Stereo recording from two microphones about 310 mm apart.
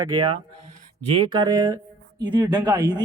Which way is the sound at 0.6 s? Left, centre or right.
Right.